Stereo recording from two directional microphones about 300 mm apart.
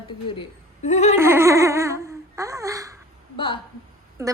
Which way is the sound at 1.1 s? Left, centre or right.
Centre.